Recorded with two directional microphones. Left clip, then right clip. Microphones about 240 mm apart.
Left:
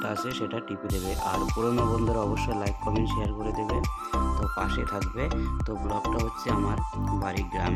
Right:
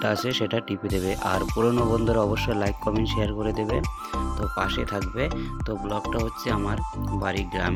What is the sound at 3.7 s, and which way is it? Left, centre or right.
Speech, centre.